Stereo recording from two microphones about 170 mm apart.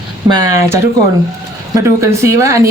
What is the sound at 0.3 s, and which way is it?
Speech, 25° right (ahead or behind).